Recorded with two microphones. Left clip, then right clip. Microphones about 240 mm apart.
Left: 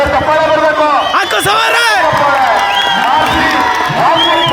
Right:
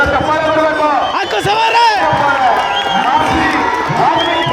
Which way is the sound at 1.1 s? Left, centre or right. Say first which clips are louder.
Left 3 dB; left.